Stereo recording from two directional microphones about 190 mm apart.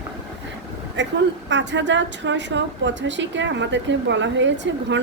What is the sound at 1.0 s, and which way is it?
A woman's voice, 70° right (ahead or behind).